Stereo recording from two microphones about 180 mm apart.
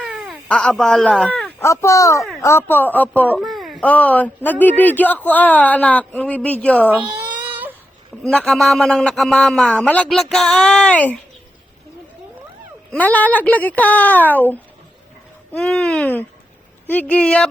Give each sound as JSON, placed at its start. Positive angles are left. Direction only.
{"t": 0.0, "sound": "baby cry", "side_deg": -5}
{"t": 0.4, "sound": "speech", "side_deg": 5}
{"t": 1.6, "sound": "speech", "side_deg": 15}
{"t": 7.4, "sound": "baby cry", "side_deg": -10}
{"t": 8.2, "sound": "a man's voice", "side_deg": 5}
{"t": 12.9, "sound": "a man's voice", "side_deg": 10}